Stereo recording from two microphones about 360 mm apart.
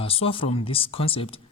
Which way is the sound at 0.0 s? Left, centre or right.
Centre.